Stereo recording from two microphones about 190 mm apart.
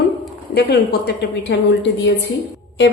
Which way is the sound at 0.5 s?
60° left (ahead or behind).